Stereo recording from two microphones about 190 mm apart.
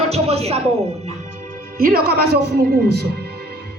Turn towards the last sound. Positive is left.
turn(degrees=-60)  # may be behind; listen again after turning